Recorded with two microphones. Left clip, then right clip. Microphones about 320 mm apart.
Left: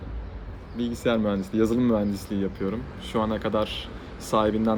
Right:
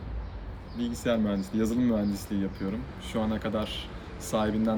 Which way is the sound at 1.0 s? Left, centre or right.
Centre.